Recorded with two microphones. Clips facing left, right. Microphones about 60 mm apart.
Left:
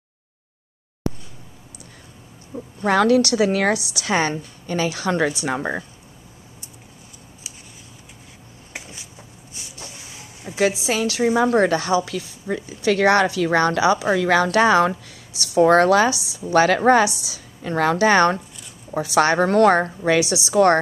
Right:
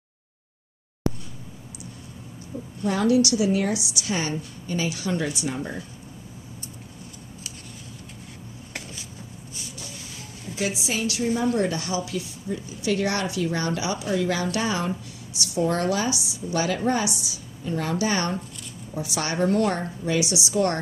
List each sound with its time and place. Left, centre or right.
2.8 s a woman's voice: left
11.1 s speech: left
12.1 s a woman's voice: left
20.5 s speech: left